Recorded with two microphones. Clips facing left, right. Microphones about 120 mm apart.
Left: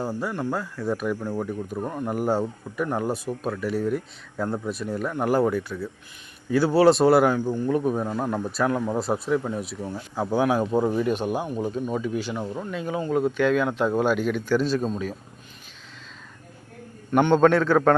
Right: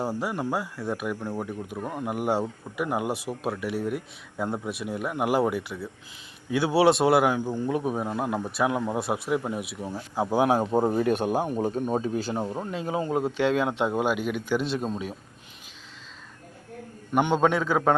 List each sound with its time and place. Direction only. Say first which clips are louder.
0.0 s speech: left 1 dB; 15° right (ahead or behind)
10.5 s speech: even; 30° right (ahead or behind)
10.8 s speech: even; 45° right (ahead or behind); by 15.1 s 20° right (ahead or behind)
17.1 s speech: left 5 dB; 10° right (ahead or behind)